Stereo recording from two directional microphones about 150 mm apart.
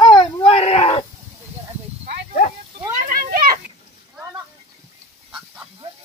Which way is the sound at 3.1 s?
75° right (ahead or behind).